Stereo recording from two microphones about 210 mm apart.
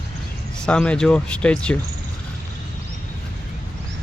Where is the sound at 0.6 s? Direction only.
5° left (ahead or behind).